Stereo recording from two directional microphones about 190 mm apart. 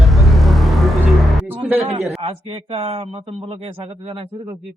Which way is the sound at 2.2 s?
30° right (ahead or behind).